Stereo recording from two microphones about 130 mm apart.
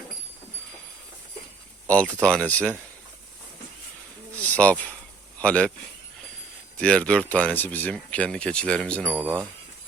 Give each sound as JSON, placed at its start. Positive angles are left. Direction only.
{"t": 1.9, "sound": "speech", "side_deg": 10}
{"t": 4.4, "sound": "speech", "side_deg": 10}
{"t": 6.7, "sound": "speech", "side_deg": 10}